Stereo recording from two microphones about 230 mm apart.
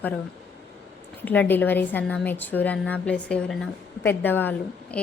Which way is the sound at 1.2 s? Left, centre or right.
Centre.